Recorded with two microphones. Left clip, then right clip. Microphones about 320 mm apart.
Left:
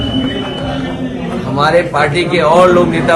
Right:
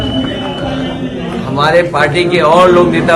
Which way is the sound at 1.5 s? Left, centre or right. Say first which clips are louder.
Right 1 dB; centre.